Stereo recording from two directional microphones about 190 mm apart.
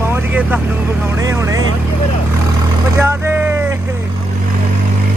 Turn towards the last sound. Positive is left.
turn(degrees=-10)  # may be behind; listen again after turning